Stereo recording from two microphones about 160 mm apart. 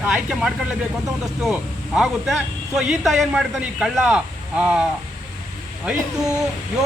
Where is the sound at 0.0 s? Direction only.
5° right (ahead or behind).